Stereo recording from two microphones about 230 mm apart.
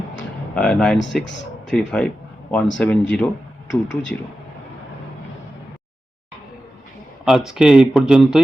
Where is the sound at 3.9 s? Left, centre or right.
Left.